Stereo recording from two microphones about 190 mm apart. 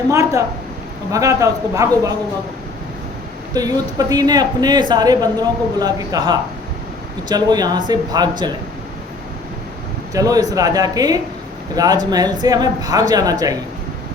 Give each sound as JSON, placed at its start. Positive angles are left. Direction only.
{"t": 0.1, "sound": "a man's voice", "side_deg": -15}
{"t": 3.5, "sound": "speech", "side_deg": -20}
{"t": 10.2, "sound": "speech", "side_deg": -20}